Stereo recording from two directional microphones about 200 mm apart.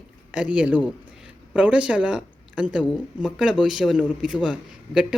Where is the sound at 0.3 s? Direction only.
5° right (ahead or behind).